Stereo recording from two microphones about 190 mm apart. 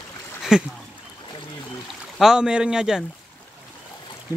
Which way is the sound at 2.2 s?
5° right (ahead or behind).